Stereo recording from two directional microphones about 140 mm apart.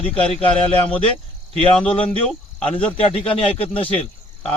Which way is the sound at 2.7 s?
40° left (ahead or behind).